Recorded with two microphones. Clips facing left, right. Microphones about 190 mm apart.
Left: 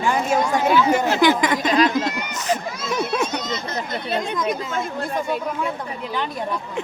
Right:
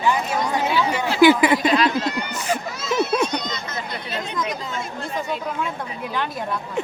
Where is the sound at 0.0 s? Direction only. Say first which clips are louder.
Left 2 dB; 45° left (ahead or behind).